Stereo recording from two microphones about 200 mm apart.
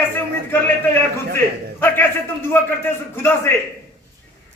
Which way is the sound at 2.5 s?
10° left (ahead or behind).